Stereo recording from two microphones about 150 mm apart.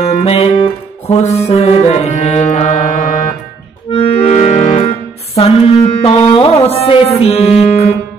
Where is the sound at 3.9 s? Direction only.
40° left (ahead or behind).